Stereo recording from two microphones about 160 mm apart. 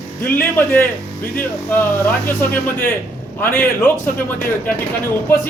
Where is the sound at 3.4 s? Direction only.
15° left (ahead or behind).